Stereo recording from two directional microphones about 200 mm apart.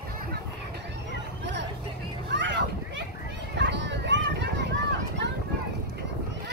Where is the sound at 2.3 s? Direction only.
65° right (ahead or behind).